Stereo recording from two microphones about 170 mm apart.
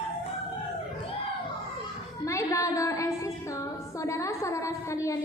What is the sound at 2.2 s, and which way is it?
Music, 20° left (ahead or behind).